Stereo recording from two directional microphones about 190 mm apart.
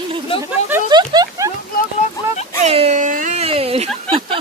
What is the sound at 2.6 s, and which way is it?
Speech, 35° right (ahead or behind).